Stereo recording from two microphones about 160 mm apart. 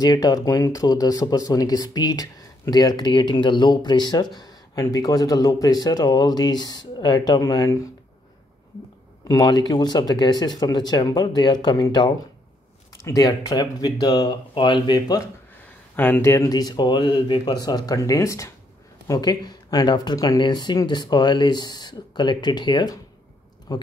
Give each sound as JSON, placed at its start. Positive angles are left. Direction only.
{"t": 0.0, "sound": "speech", "side_deg": 25}
{"t": 9.3, "sound": "speech", "side_deg": 25}